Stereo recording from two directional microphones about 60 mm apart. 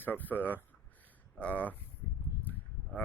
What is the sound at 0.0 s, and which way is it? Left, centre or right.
Speech, left.